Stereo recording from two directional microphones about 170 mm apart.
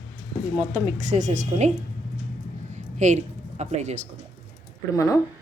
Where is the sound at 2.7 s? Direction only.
45° right (ahead or behind).